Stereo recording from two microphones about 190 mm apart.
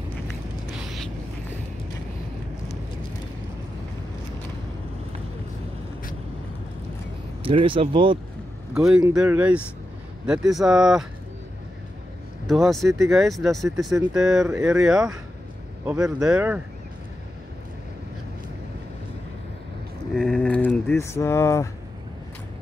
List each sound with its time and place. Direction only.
0.7 s a sound: centre (ahead or behind)
7.4 s speech: 25° right (ahead or behind)
8.7 s speech: 5° right (ahead or behind)
12.4 s speech: centre (ahead or behind)
20.2 s speech: 5° left (ahead or behind)